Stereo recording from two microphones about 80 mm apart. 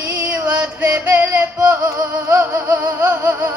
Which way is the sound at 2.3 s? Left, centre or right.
Right.